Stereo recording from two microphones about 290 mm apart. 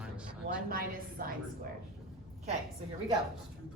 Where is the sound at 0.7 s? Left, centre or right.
Right.